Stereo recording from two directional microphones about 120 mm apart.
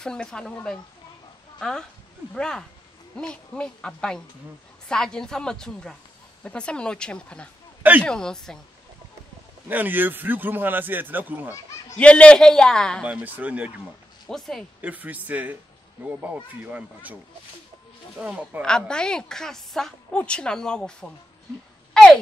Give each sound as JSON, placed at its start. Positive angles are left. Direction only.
{"t": 0.0, "sound": "a woman's voice", "side_deg": 5}
{"t": 1.6, "sound": "a woman's voice", "side_deg": 5}
{"t": 9.7, "sound": "a man's voice", "side_deg": -15}
{"t": 12.0, "sound": "a woman's voice", "side_deg": 10}
{"t": 13.0, "sound": "a man's voice", "side_deg": -10}
{"t": 14.2, "sound": "a woman's voice", "side_deg": 0}
{"t": 14.8, "sound": "a man's voice", "side_deg": -15}
{"t": 18.6, "sound": "a woman's voice", "side_deg": 5}
{"t": 21.9, "sound": "a sound", "side_deg": 5}